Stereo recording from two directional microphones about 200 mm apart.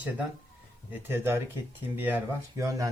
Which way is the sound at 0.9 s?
10° right (ahead or behind).